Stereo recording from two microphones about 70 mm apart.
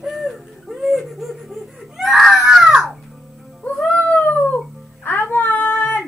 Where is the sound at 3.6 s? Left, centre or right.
Centre.